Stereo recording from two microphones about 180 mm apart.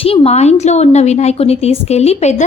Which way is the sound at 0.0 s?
30° left (ahead or behind).